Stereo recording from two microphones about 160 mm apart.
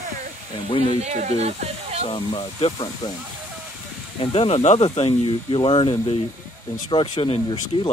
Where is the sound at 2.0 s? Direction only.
35° left (ahead or behind).